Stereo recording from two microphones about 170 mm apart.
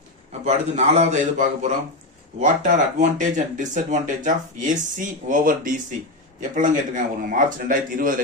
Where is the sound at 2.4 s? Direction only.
45° right (ahead or behind).